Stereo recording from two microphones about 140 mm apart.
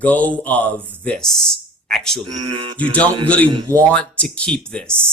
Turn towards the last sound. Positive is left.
turn(degrees=5)  # may be behind; listen again after turning